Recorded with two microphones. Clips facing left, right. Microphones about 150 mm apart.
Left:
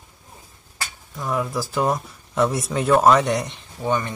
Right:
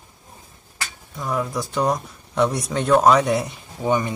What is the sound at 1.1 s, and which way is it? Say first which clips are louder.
Speech: even; centre (ahead or behind).